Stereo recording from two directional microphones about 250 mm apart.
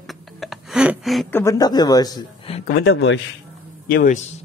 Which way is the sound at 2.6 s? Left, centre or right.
Left.